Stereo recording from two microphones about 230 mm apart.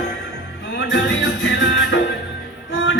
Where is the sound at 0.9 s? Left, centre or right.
Left.